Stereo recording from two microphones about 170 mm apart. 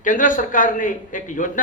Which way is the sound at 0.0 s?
50° left (ahead or behind).